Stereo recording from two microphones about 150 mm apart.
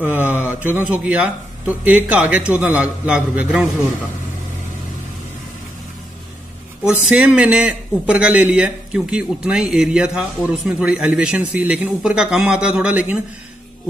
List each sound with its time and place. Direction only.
0.0 s a man's voice: 10° right (ahead or behind)
6.8 s a man's voice: 10° right (ahead or behind)